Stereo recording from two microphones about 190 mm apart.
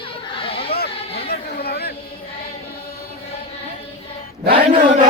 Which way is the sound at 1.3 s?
55° left (ahead or behind).